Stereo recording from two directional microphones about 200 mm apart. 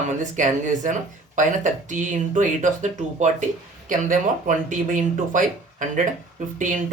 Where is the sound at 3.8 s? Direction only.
40° right (ahead or behind).